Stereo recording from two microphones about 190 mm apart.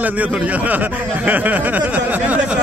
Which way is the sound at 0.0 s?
10° right (ahead or behind).